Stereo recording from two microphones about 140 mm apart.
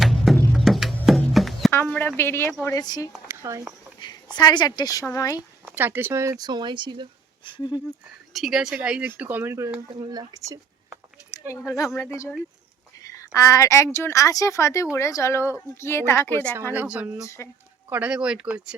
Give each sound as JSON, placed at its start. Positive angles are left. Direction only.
{"t": 0.0, "sound": "music", "side_deg": 0}
{"t": 1.7, "sound": "speech", "side_deg": 15}
{"t": 2.6, "sound": "a woman's voice", "side_deg": 30}
{"t": 3.2, "sound": "speech", "side_deg": -20}
{"t": 4.4, "sound": "a woman's voice", "side_deg": 30}
{"t": 5.6, "sound": "speech", "side_deg": -15}
{"t": 6.4, "sound": "speech", "side_deg": -30}
{"t": 7.4, "sound": "speech", "side_deg": 35}
{"t": 8.3, "sound": "speech", "side_deg": 0}
{"t": 9.9, "sound": "speech", "side_deg": -30}
{"t": 11.9, "sound": "a woman's voice", "side_deg": 20}
{"t": 16.7, "sound": "speech", "side_deg": -10}
{"t": 17.2, "sound": "a woman's voice", "side_deg": 20}
{"t": 17.8, "sound": "speech", "side_deg": -10}